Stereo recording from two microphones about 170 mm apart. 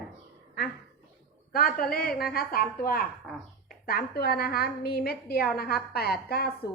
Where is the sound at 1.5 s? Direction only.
60° left (ahead or behind).